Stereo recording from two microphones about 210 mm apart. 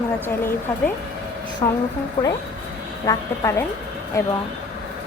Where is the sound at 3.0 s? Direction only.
15° left (ahead or behind).